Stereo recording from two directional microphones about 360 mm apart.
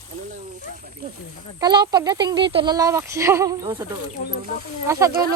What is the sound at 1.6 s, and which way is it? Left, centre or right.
Speech, centre.